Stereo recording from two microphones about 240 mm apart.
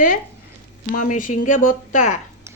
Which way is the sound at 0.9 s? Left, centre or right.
Left.